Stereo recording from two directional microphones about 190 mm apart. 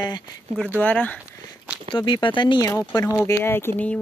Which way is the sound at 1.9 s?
25° left (ahead or behind).